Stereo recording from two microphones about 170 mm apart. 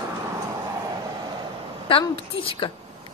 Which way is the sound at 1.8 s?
30° left (ahead or behind).